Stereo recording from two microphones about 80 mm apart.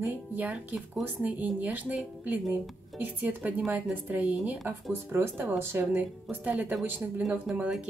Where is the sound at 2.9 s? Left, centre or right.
Right.